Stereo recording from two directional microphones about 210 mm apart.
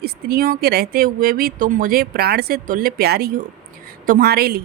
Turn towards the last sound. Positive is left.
turn(degrees=-45)  # may be behind; listen again after turning